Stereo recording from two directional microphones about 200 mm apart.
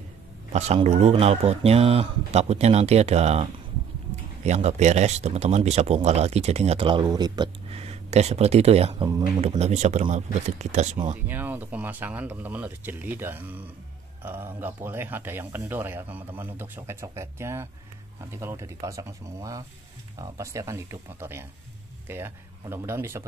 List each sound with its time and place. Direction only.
0.5 s speech: 35° right (ahead or behind)
11.2 s speech: 10° right (ahead or behind)